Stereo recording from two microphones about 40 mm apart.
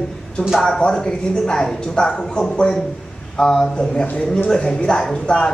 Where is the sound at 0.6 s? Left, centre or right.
Centre.